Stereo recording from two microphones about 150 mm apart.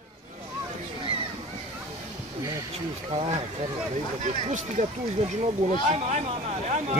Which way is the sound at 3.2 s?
45° right (ahead or behind).